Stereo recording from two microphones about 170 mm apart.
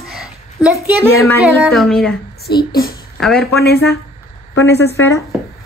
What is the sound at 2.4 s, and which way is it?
Speech, 65° left (ahead or behind).